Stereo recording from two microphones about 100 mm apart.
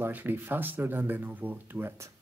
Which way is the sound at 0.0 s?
20° right (ahead or behind).